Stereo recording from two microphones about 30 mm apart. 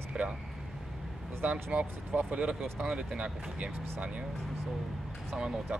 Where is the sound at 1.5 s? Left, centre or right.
Right.